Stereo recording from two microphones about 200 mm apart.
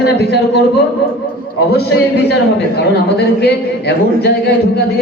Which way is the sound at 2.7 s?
55° left (ahead or behind).